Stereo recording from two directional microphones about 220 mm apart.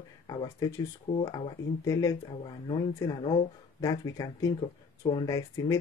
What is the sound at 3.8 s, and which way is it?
Speech, 15° left (ahead or behind).